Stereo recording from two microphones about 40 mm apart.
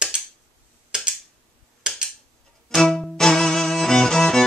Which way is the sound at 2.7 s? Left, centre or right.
Centre.